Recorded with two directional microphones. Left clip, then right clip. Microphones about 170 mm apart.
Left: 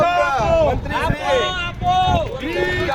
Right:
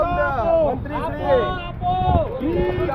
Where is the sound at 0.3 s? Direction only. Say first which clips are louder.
Left 2 dB; 35° left (ahead or behind).